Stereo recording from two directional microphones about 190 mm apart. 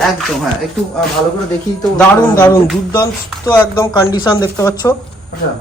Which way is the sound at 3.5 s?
20° left (ahead or behind).